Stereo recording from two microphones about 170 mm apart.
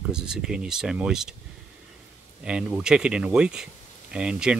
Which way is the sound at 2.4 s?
5° right (ahead or behind).